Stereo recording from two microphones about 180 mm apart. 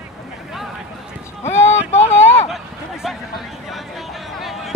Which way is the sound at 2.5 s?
Centre (ahead or behind).